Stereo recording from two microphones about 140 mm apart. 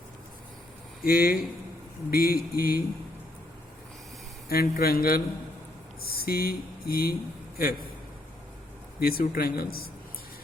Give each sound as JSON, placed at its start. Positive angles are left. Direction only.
{"t": 1.0, "sound": "speech", "side_deg": 90}
{"t": 4.4, "sound": "speech", "side_deg": 90}
{"t": 9.0, "sound": "speech", "side_deg": 90}